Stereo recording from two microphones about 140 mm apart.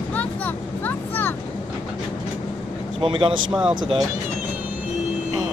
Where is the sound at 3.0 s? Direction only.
40° right (ahead or behind).